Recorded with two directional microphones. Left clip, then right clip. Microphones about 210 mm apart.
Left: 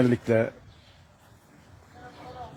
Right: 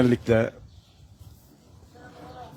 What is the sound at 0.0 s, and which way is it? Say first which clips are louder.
Speech: right 2 dB; 10° right (ahead or behind).